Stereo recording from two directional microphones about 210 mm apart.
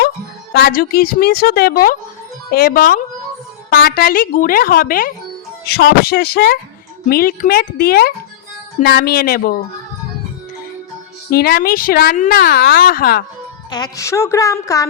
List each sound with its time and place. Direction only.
0.5 s speech: 45° left (ahead or behind)
11.3 s speech: 45° left (ahead or behind)
13.7 s a woman's voice: 20° left (ahead or behind)